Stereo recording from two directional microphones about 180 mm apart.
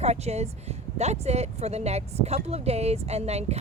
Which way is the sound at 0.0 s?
35° right (ahead or behind).